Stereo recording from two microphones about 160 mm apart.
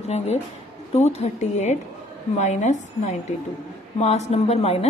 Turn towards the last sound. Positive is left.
turn(degrees=40)  # may be behind; listen again after turning